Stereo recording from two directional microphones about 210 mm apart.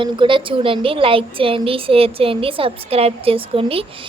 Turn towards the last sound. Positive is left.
turn(degrees=-25)  # may be behind; listen again after turning